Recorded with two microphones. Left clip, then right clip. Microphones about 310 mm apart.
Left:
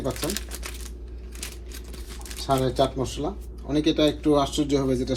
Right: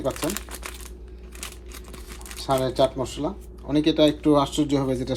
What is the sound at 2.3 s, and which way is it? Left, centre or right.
Speech, right.